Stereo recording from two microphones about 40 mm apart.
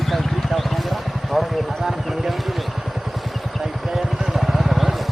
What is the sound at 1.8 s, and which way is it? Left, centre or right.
Vehicle, centre.